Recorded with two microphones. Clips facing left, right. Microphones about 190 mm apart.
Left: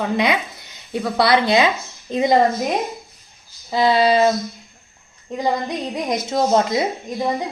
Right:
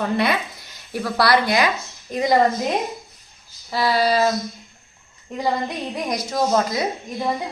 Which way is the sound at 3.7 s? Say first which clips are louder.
Left 4 dB; 20° left (ahead or behind).